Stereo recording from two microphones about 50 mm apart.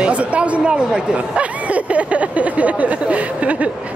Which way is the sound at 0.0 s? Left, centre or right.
Right.